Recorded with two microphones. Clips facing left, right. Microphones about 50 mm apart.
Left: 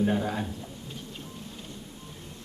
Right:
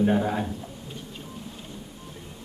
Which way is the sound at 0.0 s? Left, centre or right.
Centre.